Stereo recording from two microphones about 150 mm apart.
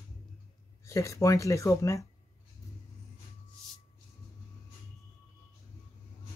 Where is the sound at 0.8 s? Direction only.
20° left (ahead or behind).